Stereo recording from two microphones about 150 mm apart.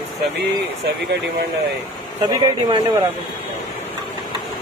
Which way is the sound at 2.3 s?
30° right (ahead or behind).